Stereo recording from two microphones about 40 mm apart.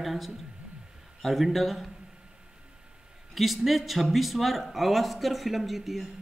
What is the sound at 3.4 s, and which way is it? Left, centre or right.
Speech, centre.